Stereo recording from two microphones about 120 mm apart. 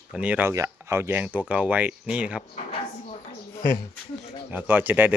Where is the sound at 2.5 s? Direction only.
65° left (ahead or behind).